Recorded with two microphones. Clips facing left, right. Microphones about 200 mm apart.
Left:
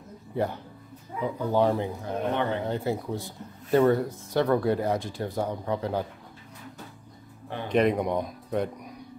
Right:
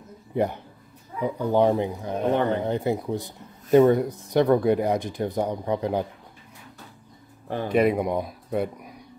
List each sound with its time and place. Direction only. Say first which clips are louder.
0.3 s speech: right 4 dB; 15° right (ahead or behind)
7.6 s speech: right 2 dB; 5° right (ahead or behind)